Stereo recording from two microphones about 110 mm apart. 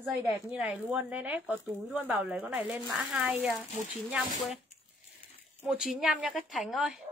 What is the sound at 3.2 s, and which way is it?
Speech, 15° right (ahead or behind).